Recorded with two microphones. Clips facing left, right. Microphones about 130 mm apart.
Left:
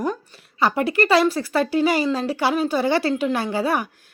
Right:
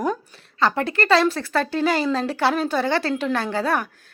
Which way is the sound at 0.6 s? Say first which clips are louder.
Left 2 dB; 10° left (ahead or behind).